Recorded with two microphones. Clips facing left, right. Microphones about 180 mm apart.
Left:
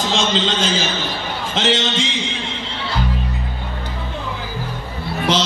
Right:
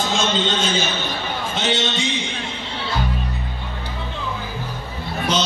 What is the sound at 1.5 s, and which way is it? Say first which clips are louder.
Speech: left 4 dB; 90° left.